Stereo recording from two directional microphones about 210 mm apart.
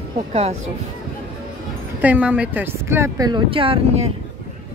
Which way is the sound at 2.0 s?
5° right (ahead or behind).